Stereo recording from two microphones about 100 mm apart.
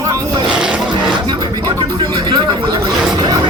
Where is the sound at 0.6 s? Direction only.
10° right (ahead or behind).